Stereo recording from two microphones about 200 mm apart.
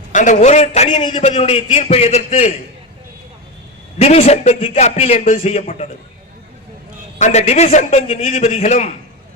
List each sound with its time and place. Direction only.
0.1 s a man's voice: 40° left (ahead or behind)
3.9 s a man's voice: 30° left (ahead or behind)
7.2 s a man's voice: 35° left (ahead or behind)